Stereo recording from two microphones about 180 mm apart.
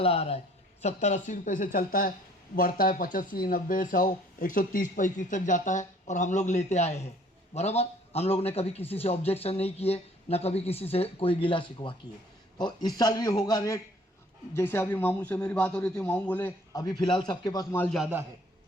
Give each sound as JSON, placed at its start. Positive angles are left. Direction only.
{"t": 0.0, "sound": "a man's voice", "side_deg": 35}
{"t": 16.7, "sound": "a man's voice", "side_deg": 25}
{"t": 17.9, "sound": "a man's voice", "side_deg": -5}